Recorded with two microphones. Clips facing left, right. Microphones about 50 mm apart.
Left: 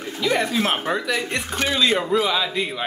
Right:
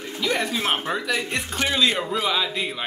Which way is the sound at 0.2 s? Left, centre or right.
Centre.